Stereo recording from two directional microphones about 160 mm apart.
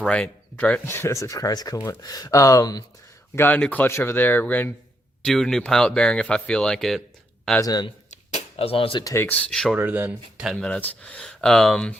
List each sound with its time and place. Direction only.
0.0 s speech: 5° left (ahead or behind); by 2.8 s 25° left (ahead or behind)
3.3 s speech: 10° left (ahead or behind)
7.6 s speech: 25° left (ahead or behind)
8.3 s speech: 40° left (ahead or behind)
9.1 s speech: 10° left (ahead or behind)
9.7 s speech: 10° right (ahead or behind); by 11.9 s 5° left (ahead or behind)